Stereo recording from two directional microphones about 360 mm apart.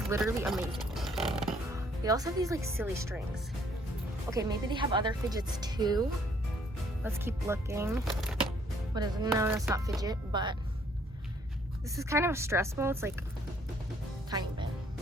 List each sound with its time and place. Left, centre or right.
0.1 s speech: centre
0.9 s music: centre
4.3 s a woman's voice: centre
11.9 s speech: centre
14.3 s speech: centre